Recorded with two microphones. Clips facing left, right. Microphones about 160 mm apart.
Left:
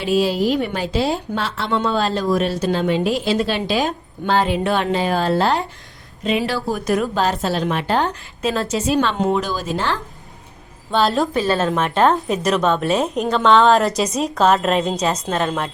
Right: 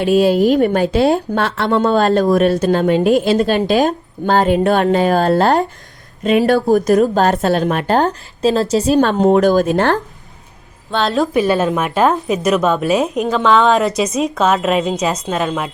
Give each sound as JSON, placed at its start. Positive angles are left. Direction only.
{"t": 0.0, "sound": "a woman's voice", "side_deg": -55}
{"t": 10.9, "sound": "a woman's voice", "side_deg": 0}
{"t": 11.3, "sound": "a woman's voice", "side_deg": -15}